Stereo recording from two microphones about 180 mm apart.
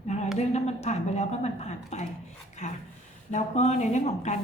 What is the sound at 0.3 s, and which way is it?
A woman's voice, 40° left (ahead or behind).